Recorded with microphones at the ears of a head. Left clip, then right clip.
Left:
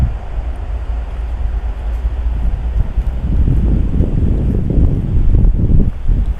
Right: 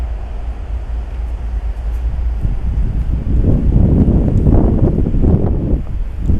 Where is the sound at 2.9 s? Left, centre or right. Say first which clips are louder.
Right 4 dB; right.